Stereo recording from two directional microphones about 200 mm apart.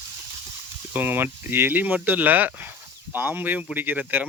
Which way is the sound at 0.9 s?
10° right (ahead or behind).